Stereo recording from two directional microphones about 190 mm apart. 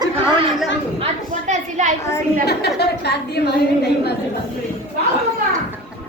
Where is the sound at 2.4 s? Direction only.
60° left (ahead or behind).